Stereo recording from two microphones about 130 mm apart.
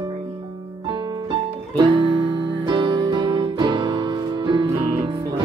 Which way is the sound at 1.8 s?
35° right (ahead or behind).